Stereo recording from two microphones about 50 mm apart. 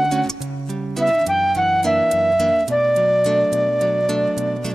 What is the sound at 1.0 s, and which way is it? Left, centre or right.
Music, centre.